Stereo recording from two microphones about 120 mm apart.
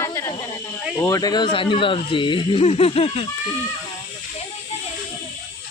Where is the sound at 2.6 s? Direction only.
60° left (ahead or behind).